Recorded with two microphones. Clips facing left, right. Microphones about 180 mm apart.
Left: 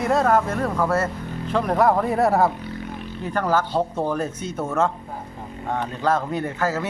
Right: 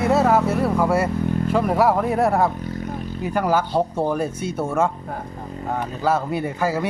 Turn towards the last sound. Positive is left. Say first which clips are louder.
# right 2 dB
turn(degrees=-10)  # may be behind; listen again after turning